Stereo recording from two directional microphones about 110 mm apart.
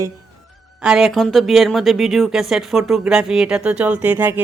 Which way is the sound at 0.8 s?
5° right (ahead or behind).